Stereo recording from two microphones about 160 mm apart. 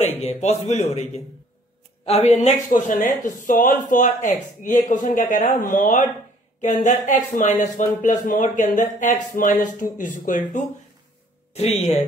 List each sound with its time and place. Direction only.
0.2 s speech: 45° left (ahead or behind)
11.5 s speech: 40° left (ahead or behind)